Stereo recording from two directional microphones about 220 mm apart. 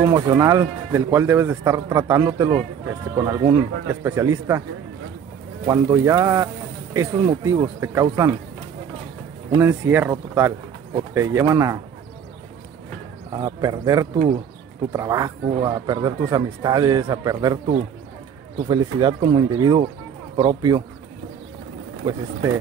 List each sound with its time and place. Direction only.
0.0 s speech: 15° right (ahead or behind)
5.7 s speech: 15° right (ahead or behind)
9.6 s speech: 10° right (ahead or behind)
13.3 s speech: 15° right (ahead or behind)
14.1 s speech: 35° right (ahead or behind)
14.9 s speech: 15° right (ahead or behind)
18.7 s speech: 20° right (ahead or behind)
22.0 s speech: 20° right (ahead or behind)